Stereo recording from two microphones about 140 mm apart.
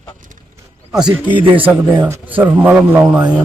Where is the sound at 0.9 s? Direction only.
5° right (ahead or behind).